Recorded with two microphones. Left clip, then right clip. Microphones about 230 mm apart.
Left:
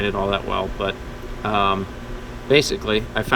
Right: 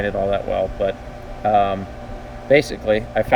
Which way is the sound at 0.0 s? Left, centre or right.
Left.